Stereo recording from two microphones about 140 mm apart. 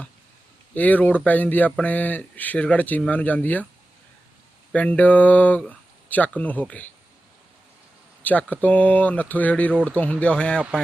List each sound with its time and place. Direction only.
0.7 s speech: 10° left (ahead or behind)
4.7 s speech: 10° left (ahead or behind)
8.2 s speech: 10° left (ahead or behind)